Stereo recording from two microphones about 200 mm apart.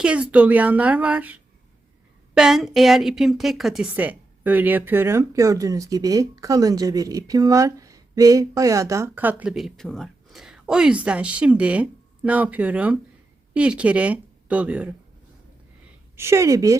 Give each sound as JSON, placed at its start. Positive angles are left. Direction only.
{"t": 0.0, "sound": "a woman's voice", "side_deg": -5}
{"t": 16.1, "sound": "a woman's voice", "side_deg": -15}